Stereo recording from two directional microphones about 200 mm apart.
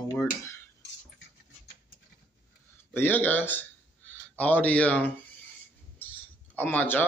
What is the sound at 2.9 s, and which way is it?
Speech, 10° left (ahead or behind).